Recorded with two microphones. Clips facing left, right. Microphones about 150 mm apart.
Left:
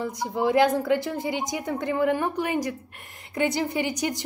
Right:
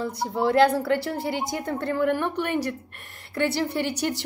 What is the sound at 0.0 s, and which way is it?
A woman's voice, 15° left (ahead or behind).